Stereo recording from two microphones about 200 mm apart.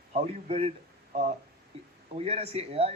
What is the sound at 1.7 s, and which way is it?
A man's voice, 30° right (ahead or behind).